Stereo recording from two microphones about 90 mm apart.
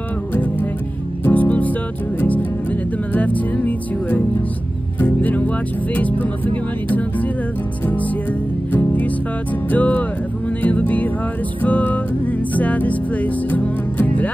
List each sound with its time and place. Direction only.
0.3 s music: 20° left (ahead or behind)
7.8 s music: 20° left (ahead or behind)